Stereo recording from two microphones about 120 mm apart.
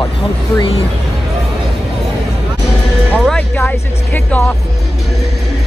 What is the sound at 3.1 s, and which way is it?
Speech, 10° left (ahead or behind).